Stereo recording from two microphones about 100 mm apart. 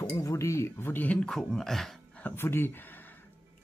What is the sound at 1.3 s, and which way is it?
Speech, 5° left (ahead or behind).